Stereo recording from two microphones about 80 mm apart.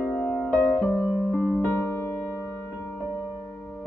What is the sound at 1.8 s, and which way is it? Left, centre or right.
Music, left.